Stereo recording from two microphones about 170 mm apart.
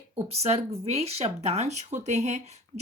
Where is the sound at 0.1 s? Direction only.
35° right (ahead or behind).